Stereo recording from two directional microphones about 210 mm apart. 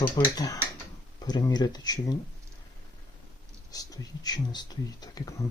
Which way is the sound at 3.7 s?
15° left (ahead or behind).